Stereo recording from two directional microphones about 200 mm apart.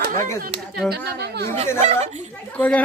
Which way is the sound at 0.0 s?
45° right (ahead or behind).